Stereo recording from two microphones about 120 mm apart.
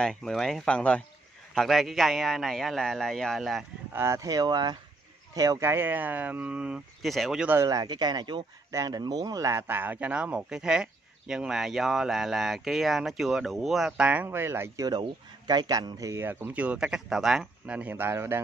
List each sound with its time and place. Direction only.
0.0 s a man's voice: 5° left (ahead or behind)
3.9 s speech: 25° right (ahead or behind); by 7.4 s centre (ahead or behind)
7.6 s speech: 30° right (ahead or behind)
14.9 s speech: 35° right (ahead or behind); by 18.4 s 20° right (ahead or behind)